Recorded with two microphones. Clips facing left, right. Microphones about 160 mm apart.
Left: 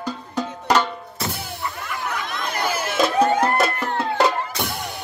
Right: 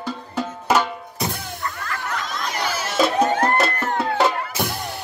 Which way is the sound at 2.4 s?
55° left (ahead or behind).